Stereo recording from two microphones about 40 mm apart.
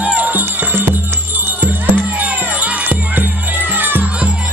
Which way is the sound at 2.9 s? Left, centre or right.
Right.